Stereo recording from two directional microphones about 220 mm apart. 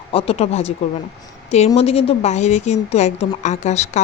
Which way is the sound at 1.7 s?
25° left (ahead or behind).